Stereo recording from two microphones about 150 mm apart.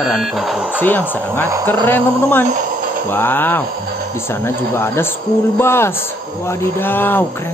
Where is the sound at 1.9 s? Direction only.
15° left (ahead or behind).